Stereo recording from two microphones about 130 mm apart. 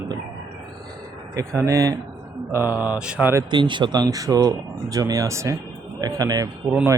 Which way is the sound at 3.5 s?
35° right (ahead or behind).